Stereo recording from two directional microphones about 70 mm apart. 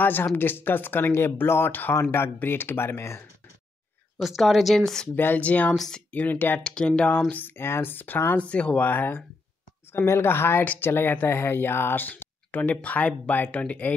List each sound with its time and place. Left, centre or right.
0.0 s speech: left
4.2 s speech: centre
5.1 s speech: left
5.8 s speech: centre
6.1 s speech: left
6.6 s speech: centre
7.2 s speech: left
8.4 s speech: centre
8.8 s speech: left